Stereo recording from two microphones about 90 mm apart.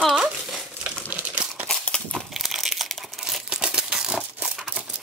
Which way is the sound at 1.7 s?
10° left (ahead or behind).